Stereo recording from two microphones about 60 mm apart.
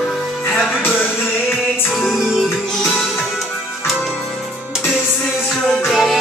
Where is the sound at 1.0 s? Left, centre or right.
Left.